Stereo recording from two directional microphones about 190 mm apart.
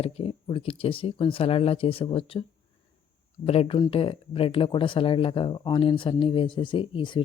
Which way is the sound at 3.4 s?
30° left (ahead or behind).